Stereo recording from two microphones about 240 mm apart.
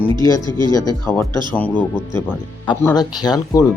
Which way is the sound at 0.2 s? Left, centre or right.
Centre.